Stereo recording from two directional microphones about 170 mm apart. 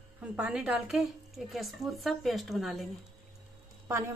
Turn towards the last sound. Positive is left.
turn(degrees=-15)  # may be behind; listen again after turning